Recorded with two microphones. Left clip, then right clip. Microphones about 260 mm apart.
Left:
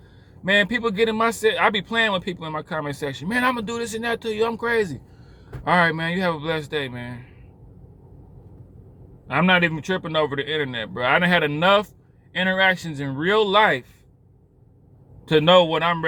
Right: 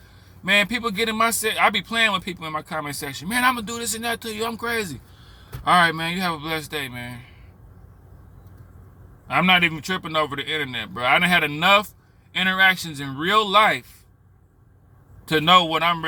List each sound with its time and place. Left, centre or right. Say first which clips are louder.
0.4 s a man's voice: even; centre
9.2 s a man's voice: right 1 dB; centre
15.3 s a man's voice: left 1 dB; centre